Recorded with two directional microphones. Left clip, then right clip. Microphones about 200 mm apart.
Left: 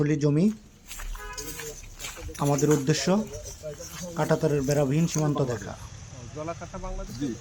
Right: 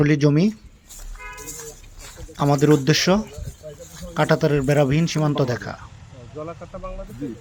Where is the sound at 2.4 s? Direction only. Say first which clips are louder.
Right 6 dB; 20° right (ahead or behind).